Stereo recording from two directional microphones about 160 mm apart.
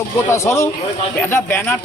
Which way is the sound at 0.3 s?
15° left (ahead or behind).